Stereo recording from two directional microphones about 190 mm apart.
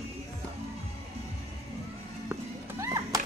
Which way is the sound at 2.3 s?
15° right (ahead or behind).